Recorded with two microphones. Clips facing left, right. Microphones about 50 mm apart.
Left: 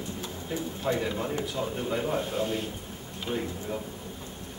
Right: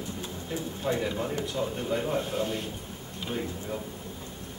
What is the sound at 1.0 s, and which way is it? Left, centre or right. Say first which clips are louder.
A man's voice: even; centre.